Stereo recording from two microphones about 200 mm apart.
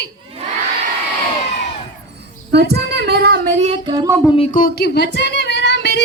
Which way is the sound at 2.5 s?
55° right (ahead or behind).